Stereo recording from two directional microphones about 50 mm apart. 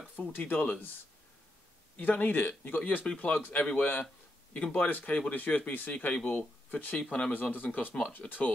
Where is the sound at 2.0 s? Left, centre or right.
Left.